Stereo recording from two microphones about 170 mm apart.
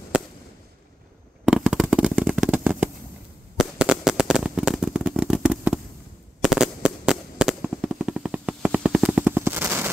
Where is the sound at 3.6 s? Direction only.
5° right (ahead or behind).